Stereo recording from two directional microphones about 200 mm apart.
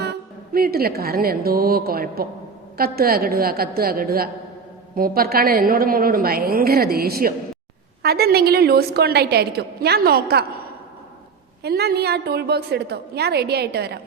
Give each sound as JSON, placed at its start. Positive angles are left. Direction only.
{"t": 0.5, "sound": "a woman's voice", "side_deg": -50}
{"t": 11.6, "sound": "a woman's voice", "side_deg": -55}